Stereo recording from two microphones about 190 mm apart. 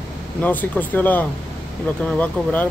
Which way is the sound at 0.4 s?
10° left (ahead or behind).